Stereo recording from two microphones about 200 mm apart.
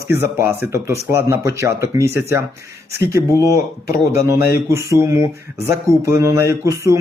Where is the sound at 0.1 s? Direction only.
10° right (ahead or behind).